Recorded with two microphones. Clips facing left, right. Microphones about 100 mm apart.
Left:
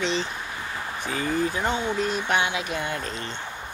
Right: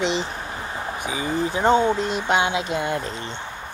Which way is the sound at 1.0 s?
15° right (ahead or behind).